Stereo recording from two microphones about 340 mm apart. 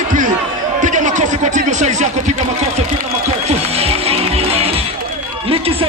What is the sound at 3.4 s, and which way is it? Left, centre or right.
Music, centre.